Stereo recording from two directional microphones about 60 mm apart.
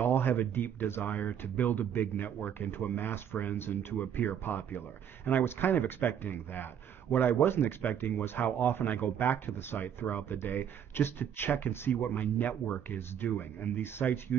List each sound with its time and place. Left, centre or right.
0.0 s speech: left